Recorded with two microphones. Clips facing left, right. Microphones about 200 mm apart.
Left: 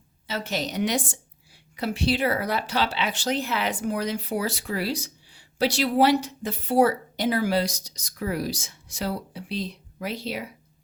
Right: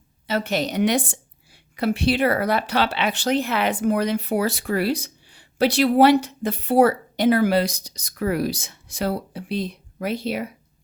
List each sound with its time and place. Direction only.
0.3 s a woman's voice: 55° right (ahead or behind)